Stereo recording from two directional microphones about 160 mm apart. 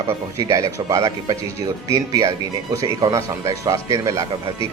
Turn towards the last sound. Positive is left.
turn(degrees=-20)  # may be behind; listen again after turning